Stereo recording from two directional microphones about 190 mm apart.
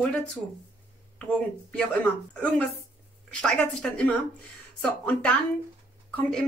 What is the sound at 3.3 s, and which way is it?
A woman's voice, 5° left (ahead or behind).